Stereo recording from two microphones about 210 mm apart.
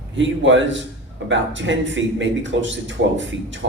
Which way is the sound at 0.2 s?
60° right (ahead or behind).